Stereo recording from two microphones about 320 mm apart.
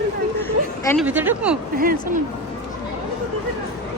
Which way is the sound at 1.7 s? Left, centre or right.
Right.